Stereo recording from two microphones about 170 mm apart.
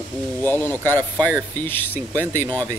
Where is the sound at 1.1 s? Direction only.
10° right (ahead or behind).